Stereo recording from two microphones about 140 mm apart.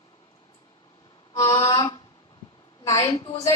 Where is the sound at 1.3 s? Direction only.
25° left (ahead or behind).